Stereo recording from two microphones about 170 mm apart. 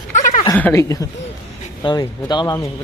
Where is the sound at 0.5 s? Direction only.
15° left (ahead or behind).